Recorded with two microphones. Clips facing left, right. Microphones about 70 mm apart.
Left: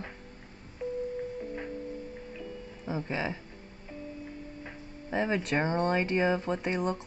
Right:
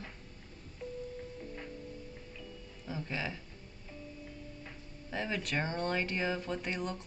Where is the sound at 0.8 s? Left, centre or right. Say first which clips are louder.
Left 8 dB; left.